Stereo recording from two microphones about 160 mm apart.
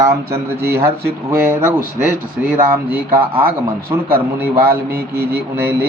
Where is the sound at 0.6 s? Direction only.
85° right.